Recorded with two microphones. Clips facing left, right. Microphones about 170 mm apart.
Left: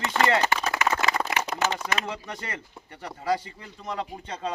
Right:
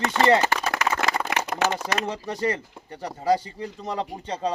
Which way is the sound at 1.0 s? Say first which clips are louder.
Right 1 dB; 50° right (ahead or behind).